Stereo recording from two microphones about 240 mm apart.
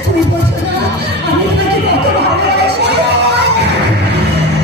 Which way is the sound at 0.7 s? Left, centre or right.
Right.